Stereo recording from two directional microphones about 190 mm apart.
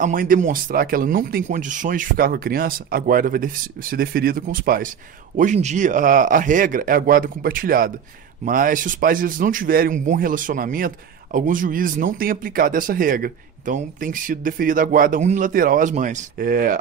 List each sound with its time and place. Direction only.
0.0 s speech: 45° right (ahead or behind)